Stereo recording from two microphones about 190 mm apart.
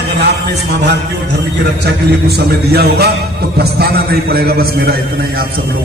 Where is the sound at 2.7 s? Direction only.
55° right (ahead or behind).